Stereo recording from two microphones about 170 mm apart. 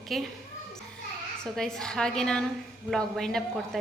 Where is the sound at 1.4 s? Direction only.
Centre (ahead or behind).